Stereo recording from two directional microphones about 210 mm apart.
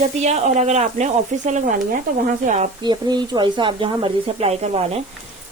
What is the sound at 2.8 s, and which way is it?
Speech, 20° right (ahead or behind).